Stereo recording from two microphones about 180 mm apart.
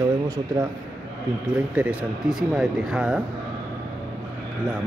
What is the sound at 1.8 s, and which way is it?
Speech, 5° right (ahead or behind).